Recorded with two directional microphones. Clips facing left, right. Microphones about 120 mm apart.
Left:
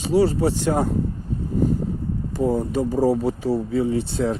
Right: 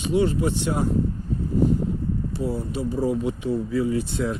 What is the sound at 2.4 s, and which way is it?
Speech, 50° left (ahead or behind).